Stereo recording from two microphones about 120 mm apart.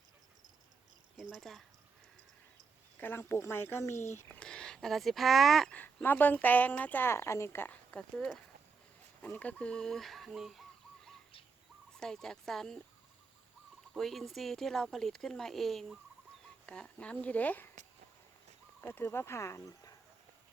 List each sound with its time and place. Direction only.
1.1 s speech: 5° right (ahead or behind)
3.0 s speech: 20° left (ahead or behind)
4.4 s speech: 5° left (ahead or behind)
13.9 s speech: centre (ahead or behind)
18.8 s speech: 20° left (ahead or behind)